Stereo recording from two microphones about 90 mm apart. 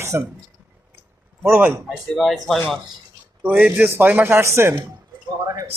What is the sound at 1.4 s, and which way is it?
Speech, 25° right (ahead or behind).